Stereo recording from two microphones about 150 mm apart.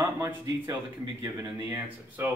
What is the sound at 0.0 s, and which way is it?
Speech, 25° right (ahead or behind).